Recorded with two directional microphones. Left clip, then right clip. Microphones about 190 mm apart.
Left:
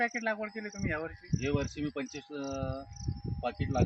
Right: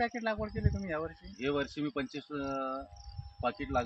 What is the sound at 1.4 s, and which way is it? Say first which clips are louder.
Speech: right 1 dB; 15° left (ahead or behind).